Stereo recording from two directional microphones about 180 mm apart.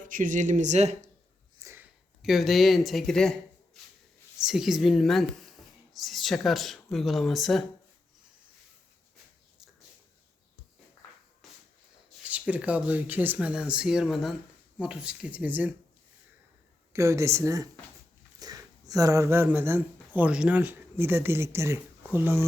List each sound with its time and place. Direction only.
0.0 s speech: 45° right (ahead or behind)
1.5 s a sound: 15° right (ahead or behind)
2.2 s speech: centre (ahead or behind)
4.4 s speech: centre (ahead or behind)
12.2 s speech: 5° right (ahead or behind)
16.9 s speech: 15° right (ahead or behind)